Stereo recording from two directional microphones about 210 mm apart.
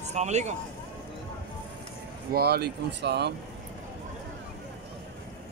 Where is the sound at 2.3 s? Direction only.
50° right (ahead or behind).